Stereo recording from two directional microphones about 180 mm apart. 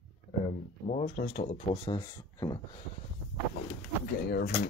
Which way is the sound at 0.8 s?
40° left (ahead or behind).